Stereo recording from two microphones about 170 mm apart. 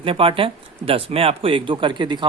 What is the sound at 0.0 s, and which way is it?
Speech, 30° right (ahead or behind).